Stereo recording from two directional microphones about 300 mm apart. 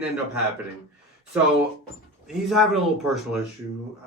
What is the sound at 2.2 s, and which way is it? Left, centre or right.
Speech, centre.